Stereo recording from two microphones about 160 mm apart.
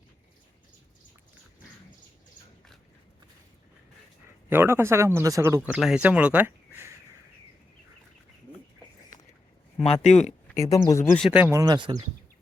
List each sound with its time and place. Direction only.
4.4 s speech: 15° right (ahead or behind)
9.8 s speech: 40° left (ahead or behind)
10.5 s speech: 20° left (ahead or behind)
11.2 s speech: 10° right (ahead or behind)
11.6 s speech: 25° right (ahead or behind)